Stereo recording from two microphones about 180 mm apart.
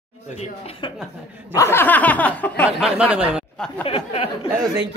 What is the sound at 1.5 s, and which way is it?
Speech, 15° left (ahead or behind).